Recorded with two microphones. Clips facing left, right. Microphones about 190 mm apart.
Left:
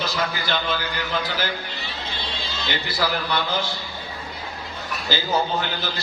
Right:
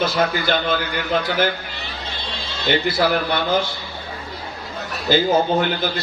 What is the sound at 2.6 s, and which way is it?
Speech, 55° right (ahead or behind).